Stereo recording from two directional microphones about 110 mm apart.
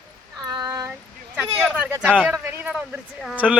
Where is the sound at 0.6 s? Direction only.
30° right (ahead or behind).